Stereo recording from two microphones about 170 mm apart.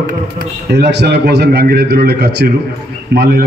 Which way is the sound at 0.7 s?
80° right.